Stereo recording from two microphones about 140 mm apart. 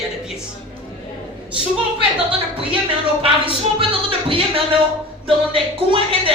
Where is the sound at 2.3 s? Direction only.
40° right (ahead or behind).